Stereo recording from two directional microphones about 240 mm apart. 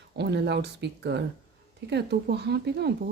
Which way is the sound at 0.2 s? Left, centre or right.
Right.